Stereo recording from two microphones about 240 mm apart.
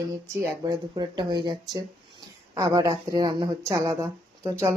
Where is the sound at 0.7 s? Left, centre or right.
Centre.